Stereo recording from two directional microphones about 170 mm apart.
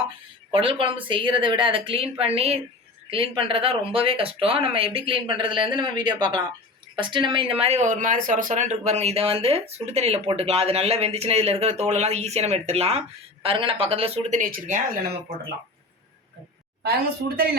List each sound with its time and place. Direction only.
0.5 s speech: 30° right (ahead or behind)
7.6 s speech: 40° right (ahead or behind)
16.8 s a woman's voice: 65° right (ahead or behind)